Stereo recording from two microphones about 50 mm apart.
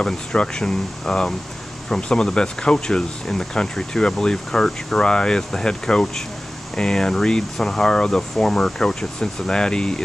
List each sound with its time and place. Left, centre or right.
0.0 s speech: centre